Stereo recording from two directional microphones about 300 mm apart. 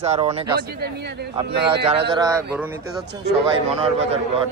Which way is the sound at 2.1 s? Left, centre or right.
Centre.